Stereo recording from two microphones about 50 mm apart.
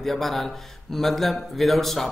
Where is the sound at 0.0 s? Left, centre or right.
Centre.